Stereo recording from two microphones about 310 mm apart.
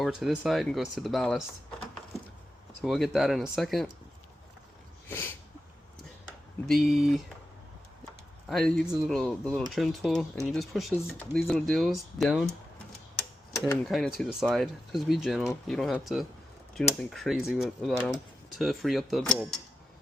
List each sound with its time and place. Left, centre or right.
0.0 s speech: centre
2.8 s speech: centre
6.7 s speech: centre
8.4 s speech: centre
13.7 s speech: centre